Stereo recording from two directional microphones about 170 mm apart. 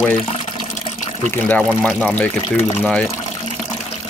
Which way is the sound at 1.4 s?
10° left (ahead or behind).